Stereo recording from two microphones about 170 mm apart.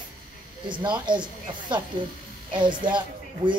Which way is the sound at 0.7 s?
25° right (ahead or behind).